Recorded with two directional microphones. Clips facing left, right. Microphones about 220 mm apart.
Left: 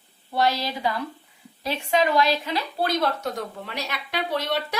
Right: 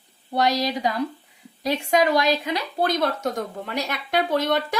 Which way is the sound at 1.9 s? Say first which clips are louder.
Right 1 dB; 40° right (ahead or behind).